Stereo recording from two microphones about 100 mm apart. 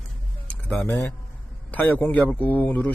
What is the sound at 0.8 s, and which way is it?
Speech, 30° left (ahead or behind).